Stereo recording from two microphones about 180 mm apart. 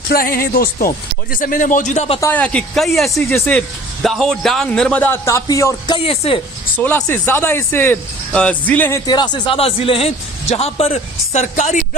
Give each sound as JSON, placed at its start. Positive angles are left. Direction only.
{"t": 0.1, "sound": "speech", "side_deg": 55}
{"t": 2.2, "sound": "a man's voice", "side_deg": 10}
{"t": 6.0, "sound": "speech", "side_deg": 30}
{"t": 6.7, "sound": "speech", "side_deg": 10}